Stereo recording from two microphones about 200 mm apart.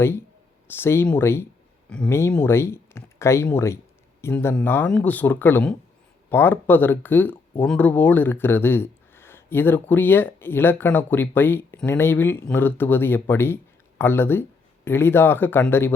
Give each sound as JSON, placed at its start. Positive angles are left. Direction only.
{"t": 0.0, "sound": "speech", "side_deg": 10}